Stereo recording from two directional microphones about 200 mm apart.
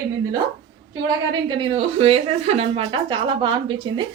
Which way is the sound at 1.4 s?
25° right (ahead or behind).